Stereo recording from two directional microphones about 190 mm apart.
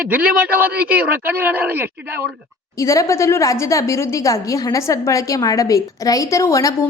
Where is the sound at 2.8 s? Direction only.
15° left (ahead or behind).